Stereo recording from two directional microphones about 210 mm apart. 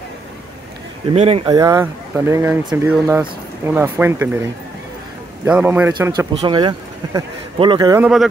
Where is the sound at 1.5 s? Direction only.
15° right (ahead or behind).